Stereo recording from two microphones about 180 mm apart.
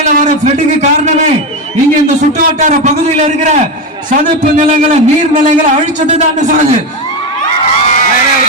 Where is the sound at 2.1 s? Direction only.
45° right (ahead or behind).